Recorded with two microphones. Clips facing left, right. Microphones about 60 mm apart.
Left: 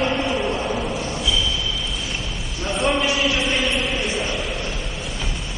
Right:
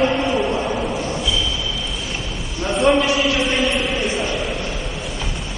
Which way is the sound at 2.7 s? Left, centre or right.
Centre.